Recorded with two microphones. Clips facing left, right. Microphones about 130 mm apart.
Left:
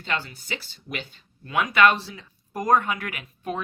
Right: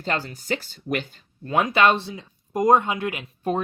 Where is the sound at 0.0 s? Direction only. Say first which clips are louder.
Right 3 dB; 40° right (ahead or behind).